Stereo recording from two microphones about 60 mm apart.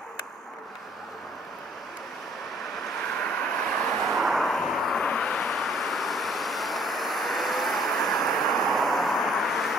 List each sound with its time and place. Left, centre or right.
3.3 s vehicle: centre
3.8 s vehicle: centre